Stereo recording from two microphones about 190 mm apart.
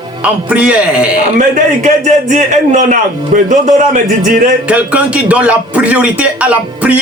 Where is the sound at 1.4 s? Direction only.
40° right (ahead or behind).